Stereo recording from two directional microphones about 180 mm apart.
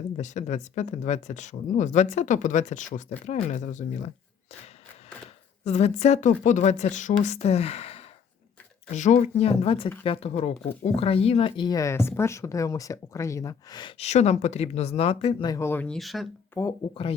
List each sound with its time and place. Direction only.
0.2 s speech: 40° left (ahead or behind)
5.6 s speech: 40° left (ahead or behind); by 13.9 s 25° left (ahead or behind)
14.0 s speech: 35° left (ahead or behind)
15.4 s speech: 15° left (ahead or behind); by 16.2 s centre (ahead or behind)
16.6 s speech: 15° left (ahead or behind)
16.9 s speech: 30° left (ahead or behind)